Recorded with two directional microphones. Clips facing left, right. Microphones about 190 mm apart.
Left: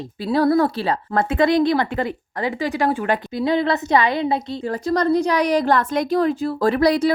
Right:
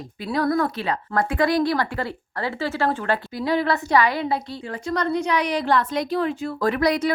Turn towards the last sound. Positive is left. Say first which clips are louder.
# left 4 dB
turn(degrees=30)  # may be behind; listen again after turning